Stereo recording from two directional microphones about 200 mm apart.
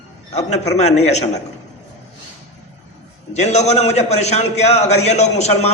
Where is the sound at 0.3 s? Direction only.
35° left (ahead or behind).